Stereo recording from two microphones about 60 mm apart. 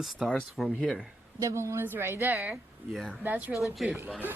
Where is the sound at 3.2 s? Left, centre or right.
Right.